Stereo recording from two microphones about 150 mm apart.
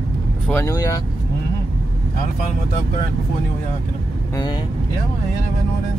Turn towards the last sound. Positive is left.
turn(degrees=30)  # may be behind; listen again after turning